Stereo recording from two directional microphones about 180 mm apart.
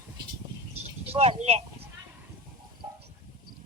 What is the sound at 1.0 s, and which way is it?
Speech, 35° right (ahead or behind).